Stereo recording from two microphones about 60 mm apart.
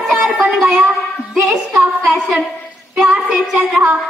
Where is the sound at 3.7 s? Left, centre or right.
Right.